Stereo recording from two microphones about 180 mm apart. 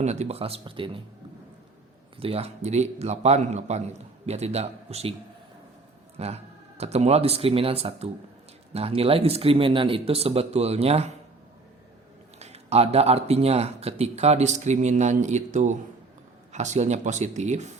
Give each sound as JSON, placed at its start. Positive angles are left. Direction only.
{"t": 0.0, "sound": "a man's voice", "side_deg": -40}
{"t": 2.1, "sound": "a man's voice", "side_deg": -30}
{"t": 6.1, "sound": "a man's voice", "side_deg": -35}
{"t": 12.4, "sound": "a man's voice", "side_deg": -35}